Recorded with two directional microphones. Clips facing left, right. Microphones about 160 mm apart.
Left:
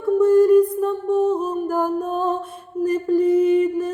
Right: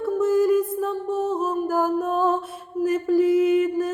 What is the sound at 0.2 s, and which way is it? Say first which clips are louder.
Music: left 6 dB; 5° right (ahead or behind).